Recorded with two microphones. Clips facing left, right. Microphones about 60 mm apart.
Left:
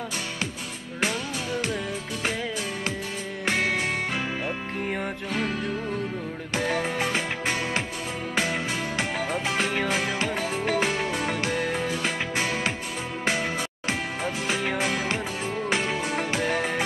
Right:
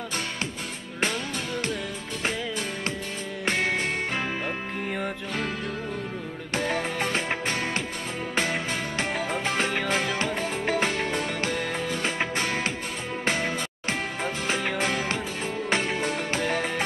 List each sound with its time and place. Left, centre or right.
8.4 s music: right
11.1 s music: left
12.0 s music: right
14.2 s music: right
14.8 s music: right
16.3 s music: left